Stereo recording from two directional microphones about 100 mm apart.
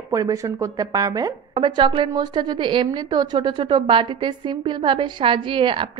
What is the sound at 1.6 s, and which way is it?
A woman's voice, 55° right (ahead or behind).